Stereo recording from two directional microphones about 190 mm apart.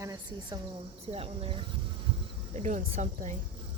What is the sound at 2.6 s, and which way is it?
Speech, 40° right (ahead or behind).